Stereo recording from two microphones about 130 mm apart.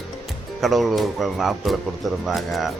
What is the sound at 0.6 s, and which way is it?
Speech, centre (ahead or behind).